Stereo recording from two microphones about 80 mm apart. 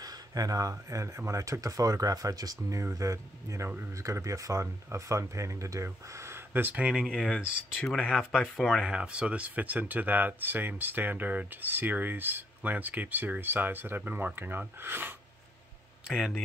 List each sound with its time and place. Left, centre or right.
0.0 s speech: right; by 7.8 s centre
7.8 s speech: centre
8.8 s speech: centre
16.1 s speech: centre